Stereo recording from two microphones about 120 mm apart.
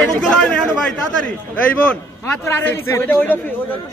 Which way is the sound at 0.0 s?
5° left (ahead or behind).